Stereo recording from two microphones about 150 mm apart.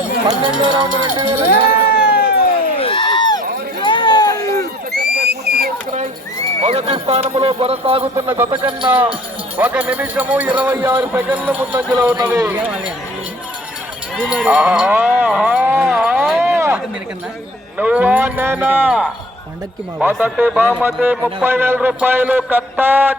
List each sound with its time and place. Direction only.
0.6 s speech: 30° right (ahead or behind)
1.5 s a sound: 85° left
2.7 s a sound: 35° left (ahead or behind)
3.8 s run: 30° left (ahead or behind)
4.9 s a sound: 90° right
6.6 s speech: 45° right (ahead or behind)
8.1 s speech: 15° right (ahead or behind)
8.4 s speech: 30° right (ahead or behind)
8.9 s speech: 10° right (ahead or behind)
11.9 s speech: 25° right (ahead or behind)
12.5 s speech: 10° right (ahead or behind)
14.4 s music: 10° right (ahead or behind)
16.4 s a sound: 15° right (ahead or behind)
17.7 s speech: 10° right (ahead or behind)